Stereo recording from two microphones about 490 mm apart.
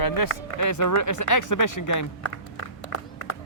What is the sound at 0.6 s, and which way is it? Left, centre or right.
Speech, left.